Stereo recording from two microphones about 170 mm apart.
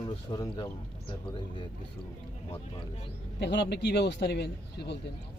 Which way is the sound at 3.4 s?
80° left.